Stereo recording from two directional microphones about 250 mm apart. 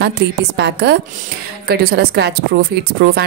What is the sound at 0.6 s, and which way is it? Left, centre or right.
A woman's voice, right.